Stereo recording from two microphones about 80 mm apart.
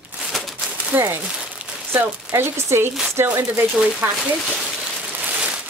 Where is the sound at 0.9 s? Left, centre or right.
Right.